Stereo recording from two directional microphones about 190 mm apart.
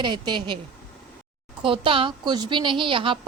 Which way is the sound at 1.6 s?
25° right (ahead or behind).